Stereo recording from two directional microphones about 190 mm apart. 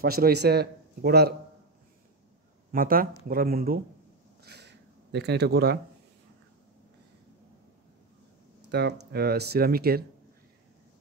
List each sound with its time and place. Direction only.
0.0 s speech: 55° right (ahead or behind)
2.7 s speech: 50° right (ahead or behind)
4.4 s a sound: 60° right (ahead or behind)
8.6 s speech: 60° right (ahead or behind)